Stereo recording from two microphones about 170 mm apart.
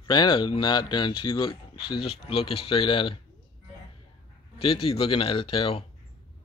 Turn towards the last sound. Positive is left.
turn(degrees=35)  # may be behind; listen again after turning